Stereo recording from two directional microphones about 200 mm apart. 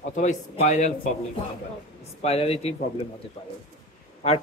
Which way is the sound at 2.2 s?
30° left (ahead or behind).